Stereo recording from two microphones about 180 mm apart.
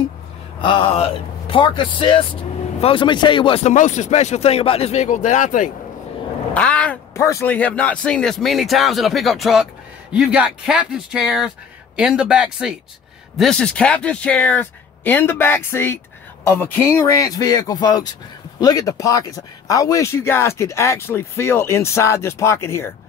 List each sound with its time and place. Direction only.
0.6 s speech: 30° left (ahead or behind)
3.7 s speech: 40° left (ahead or behind)
6.5 s speech: 5° left (ahead or behind)